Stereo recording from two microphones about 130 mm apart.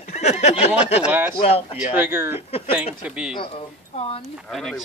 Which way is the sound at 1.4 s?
50° left (ahead or behind).